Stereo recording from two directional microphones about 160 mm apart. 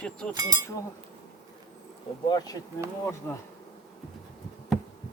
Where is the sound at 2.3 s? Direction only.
25° left (ahead or behind).